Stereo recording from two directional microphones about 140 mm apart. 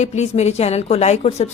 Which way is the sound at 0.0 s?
50° left (ahead or behind).